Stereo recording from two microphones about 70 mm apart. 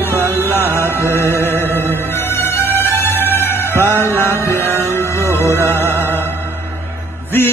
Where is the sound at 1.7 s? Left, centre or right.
Left.